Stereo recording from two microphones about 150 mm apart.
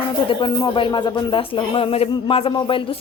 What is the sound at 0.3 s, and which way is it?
Speech, 30° left (ahead or behind).